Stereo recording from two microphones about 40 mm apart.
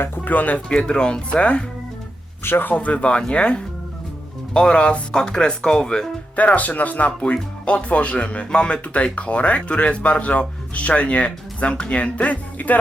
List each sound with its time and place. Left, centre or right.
0.3 s speech: left
0.7 s speech: left
2.4 s speech: left
2.7 s speech: left; by 6.1 s centre
6.3 s speech: left
7.6 s speech: left